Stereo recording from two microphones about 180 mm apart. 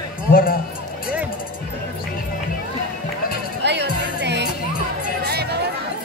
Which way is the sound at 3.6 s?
70° right (ahead or behind).